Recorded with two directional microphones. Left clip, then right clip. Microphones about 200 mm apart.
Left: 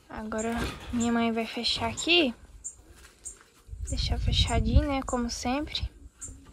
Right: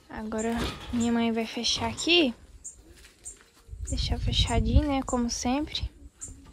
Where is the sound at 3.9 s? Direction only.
15° right (ahead or behind).